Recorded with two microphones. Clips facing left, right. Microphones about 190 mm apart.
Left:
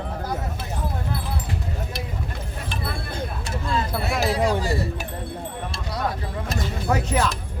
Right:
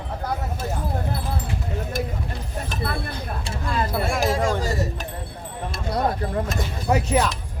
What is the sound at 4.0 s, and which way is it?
Speech, 45° right (ahead or behind).